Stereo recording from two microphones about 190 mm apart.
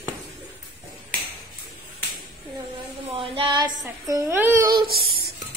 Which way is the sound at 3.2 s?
25° right (ahead or behind).